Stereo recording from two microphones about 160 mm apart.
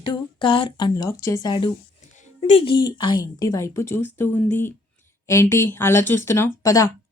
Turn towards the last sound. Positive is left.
turn(degrees=20)  # may be behind; listen again after turning